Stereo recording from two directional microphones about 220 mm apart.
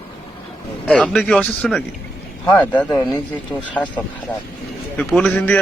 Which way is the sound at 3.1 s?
5° left (ahead or behind).